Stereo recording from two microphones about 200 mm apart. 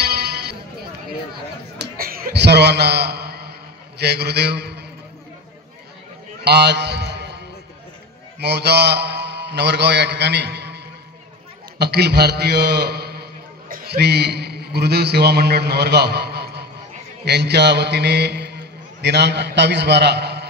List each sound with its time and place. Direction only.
0.0 s music: 55° right (ahead or behind)
1.8 s a sound: 45° right (ahead or behind)
4.0 s a man's voice: 55° right (ahead or behind)
6.4 s a sound: 55° right (ahead or behind)
8.4 s a man's voice: 55° right (ahead or behind)
11.8 s a man's voice: 55° right (ahead or behind)